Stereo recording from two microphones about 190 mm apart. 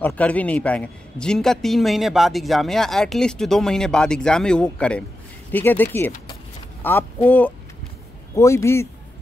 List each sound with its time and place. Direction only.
0.0 s a man's voice: 5° left (ahead or behind)